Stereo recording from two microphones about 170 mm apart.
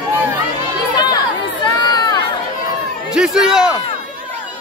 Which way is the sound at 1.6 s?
25° left (ahead or behind).